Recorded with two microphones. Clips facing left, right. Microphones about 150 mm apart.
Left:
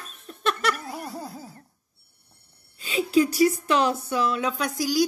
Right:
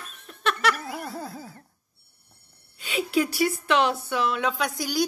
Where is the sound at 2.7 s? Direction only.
35° left (ahead or behind).